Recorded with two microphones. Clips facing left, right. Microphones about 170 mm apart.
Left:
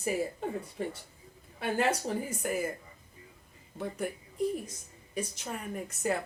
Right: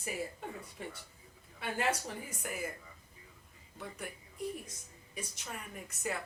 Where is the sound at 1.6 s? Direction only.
35° left (ahead or behind).